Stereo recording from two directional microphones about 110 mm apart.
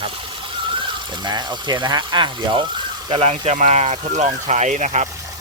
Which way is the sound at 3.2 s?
70° right (ahead or behind).